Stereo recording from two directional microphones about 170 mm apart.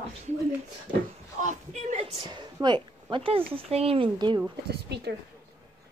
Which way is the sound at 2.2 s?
25° right (ahead or behind).